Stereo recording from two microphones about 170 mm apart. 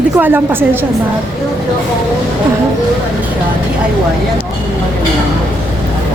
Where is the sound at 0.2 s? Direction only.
10° right (ahead or behind).